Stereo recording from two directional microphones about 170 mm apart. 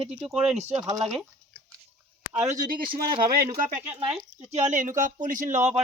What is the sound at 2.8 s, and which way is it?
Speech, 30° right (ahead or behind).